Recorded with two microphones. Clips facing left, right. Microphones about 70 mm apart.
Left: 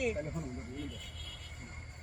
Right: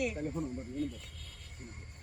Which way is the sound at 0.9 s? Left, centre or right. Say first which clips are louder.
Right 2 dB; left.